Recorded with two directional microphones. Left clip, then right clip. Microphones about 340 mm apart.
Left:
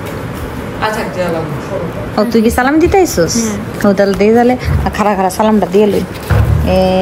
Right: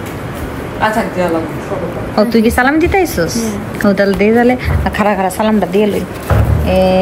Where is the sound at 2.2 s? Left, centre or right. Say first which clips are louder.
Even; centre.